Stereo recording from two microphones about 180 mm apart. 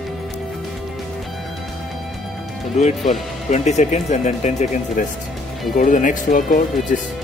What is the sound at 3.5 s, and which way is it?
Speech, 40° left (ahead or behind).